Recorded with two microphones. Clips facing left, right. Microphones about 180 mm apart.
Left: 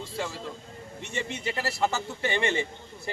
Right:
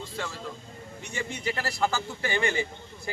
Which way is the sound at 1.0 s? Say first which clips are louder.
Even; 25° left (ahead or behind).